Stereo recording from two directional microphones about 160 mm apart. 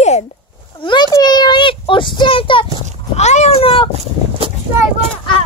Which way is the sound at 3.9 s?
35° right (ahead or behind).